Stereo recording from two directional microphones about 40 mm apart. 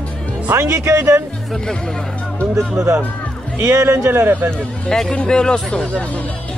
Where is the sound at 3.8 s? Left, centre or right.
Right.